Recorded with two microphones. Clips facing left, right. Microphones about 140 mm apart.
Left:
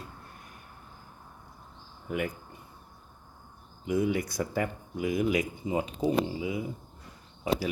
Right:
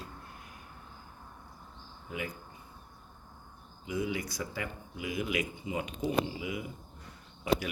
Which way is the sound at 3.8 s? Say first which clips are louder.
Left 6 dB; 50° left (ahead or behind).